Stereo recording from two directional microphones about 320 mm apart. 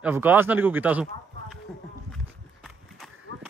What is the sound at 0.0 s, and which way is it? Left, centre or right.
Speech, centre.